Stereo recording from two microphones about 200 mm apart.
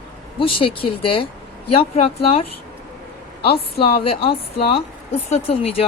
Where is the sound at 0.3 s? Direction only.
25° left (ahead or behind).